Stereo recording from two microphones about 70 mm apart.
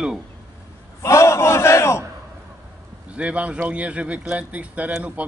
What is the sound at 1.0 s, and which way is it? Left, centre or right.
A man's voice, left.